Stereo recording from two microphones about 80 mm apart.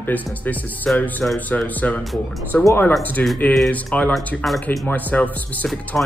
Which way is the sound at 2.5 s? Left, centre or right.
Left.